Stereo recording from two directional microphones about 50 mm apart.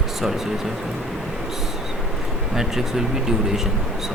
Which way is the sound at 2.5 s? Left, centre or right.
Centre.